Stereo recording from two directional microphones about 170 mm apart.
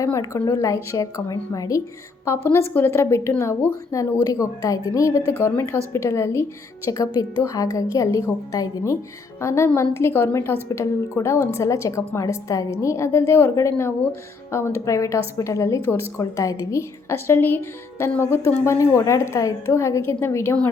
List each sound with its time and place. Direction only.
0.0 s a woman's voice: 20° left (ahead or behind)